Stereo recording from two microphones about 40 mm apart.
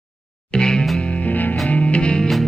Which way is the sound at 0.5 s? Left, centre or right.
Centre.